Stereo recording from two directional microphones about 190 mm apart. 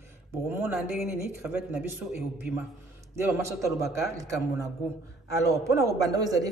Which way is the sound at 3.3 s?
15° right (ahead or behind).